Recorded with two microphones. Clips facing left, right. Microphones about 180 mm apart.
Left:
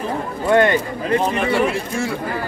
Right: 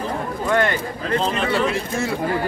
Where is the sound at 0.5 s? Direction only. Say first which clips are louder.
Left 6 dB; 20° left (ahead or behind).